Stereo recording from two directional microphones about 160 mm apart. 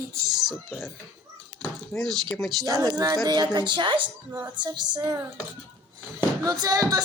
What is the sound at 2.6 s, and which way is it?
Speech, 20° right (ahead or behind).